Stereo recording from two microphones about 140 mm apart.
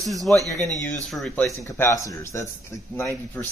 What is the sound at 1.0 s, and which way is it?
Speech, centre (ahead or behind).